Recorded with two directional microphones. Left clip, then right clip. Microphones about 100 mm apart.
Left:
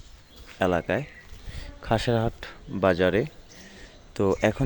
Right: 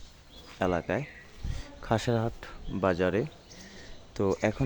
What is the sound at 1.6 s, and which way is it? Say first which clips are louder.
Speech: left 4 dB; 10° left (ahead or behind).